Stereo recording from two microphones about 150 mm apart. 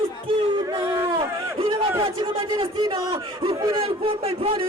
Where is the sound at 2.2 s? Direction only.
35° right (ahead or behind).